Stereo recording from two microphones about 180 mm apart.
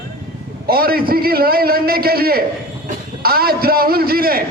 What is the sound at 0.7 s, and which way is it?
A man's voice, 55° right (ahead or behind).